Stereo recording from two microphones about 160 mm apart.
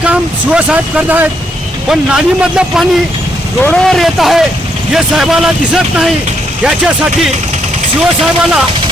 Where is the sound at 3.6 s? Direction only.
5° left (ahead or behind).